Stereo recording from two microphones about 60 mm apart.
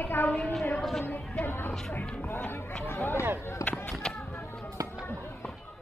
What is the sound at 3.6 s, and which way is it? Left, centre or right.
Speech, left.